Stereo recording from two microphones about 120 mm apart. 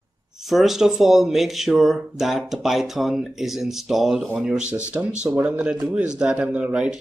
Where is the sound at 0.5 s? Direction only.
Centre (ahead or behind).